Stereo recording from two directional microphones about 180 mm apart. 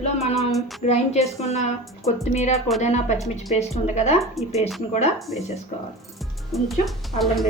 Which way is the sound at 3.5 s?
35° left (ahead or behind).